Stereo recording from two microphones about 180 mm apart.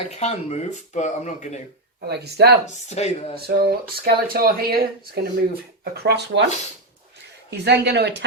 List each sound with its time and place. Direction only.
0.1 s speech: 35° left (ahead or behind)
2.0 s speech: 65° right (ahead or behind)
2.6 s speech: 35° left (ahead or behind)
3.4 s speech: 60° right (ahead or behind)
7.5 s speech: 65° right (ahead or behind)